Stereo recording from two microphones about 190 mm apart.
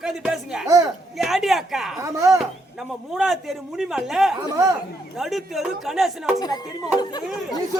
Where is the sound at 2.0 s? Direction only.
15° right (ahead or behind).